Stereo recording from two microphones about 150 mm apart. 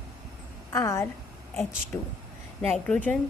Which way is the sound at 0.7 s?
20° left (ahead or behind).